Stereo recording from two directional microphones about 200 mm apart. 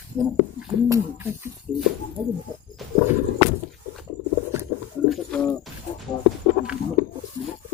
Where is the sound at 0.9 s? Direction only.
15° right (ahead or behind).